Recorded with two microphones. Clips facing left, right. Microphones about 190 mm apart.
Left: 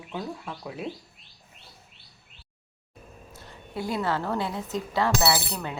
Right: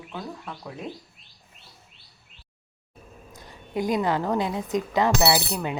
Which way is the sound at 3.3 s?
15° right (ahead or behind).